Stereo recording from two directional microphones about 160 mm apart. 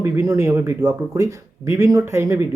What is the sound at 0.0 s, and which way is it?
Speech, 15° right (ahead or behind).